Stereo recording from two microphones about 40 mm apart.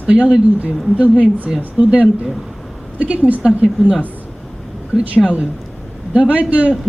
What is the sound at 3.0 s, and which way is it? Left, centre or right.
Speech, right.